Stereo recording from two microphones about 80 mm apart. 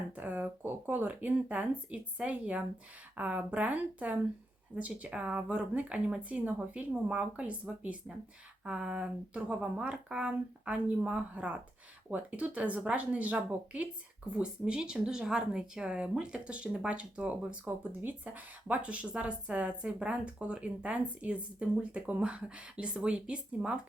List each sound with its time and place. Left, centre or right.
0.2 s a woman's voice: right